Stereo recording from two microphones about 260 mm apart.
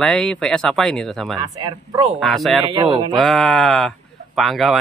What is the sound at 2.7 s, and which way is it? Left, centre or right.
Speech, centre.